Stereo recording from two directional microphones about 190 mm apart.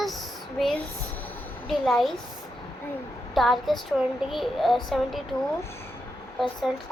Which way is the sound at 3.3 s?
Centre (ahead or behind).